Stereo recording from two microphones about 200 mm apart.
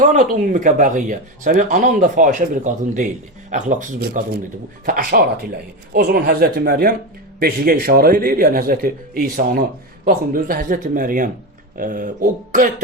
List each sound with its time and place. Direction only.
0.0 s a man's voice: 40° right (ahead or behind)